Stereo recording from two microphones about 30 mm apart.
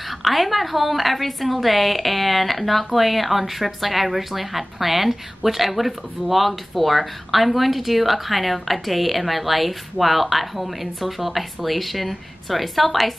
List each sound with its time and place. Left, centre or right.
0.2 s a woman's voice: centre